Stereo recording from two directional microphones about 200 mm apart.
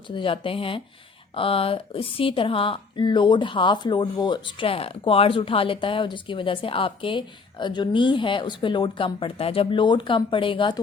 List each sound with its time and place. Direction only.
0.1 s speech: 25° left (ahead or behind)